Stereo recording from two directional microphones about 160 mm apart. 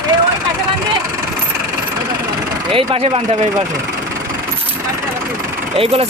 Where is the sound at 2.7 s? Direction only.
35° right (ahead or behind).